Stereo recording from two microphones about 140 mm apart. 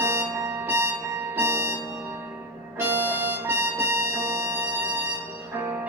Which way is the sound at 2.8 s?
15° right (ahead or behind).